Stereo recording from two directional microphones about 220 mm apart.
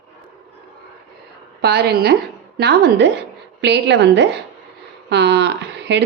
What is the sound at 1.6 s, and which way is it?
A woman's voice, 50° right (ahead or behind).